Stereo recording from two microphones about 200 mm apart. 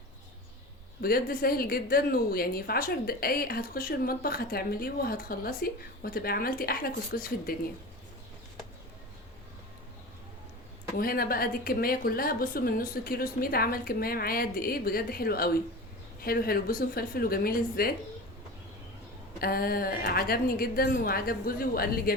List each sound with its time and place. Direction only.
1.0 s a woman's voice: 50° left (ahead or behind)
10.9 s a woman's voice: 50° left (ahead or behind)
19.4 s a woman's voice: 50° left (ahead or behind)